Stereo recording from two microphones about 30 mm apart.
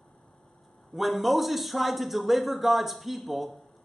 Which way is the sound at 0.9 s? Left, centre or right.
Centre.